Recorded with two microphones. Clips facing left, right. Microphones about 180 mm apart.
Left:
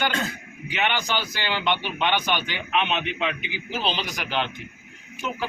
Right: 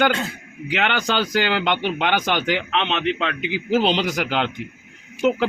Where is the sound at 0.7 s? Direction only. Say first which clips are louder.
Right 4 dB; 85° right.